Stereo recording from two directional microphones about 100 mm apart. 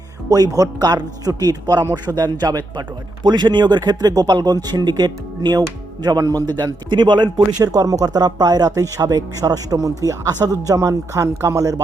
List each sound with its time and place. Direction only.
0.3 s speech: 35° right (ahead or behind)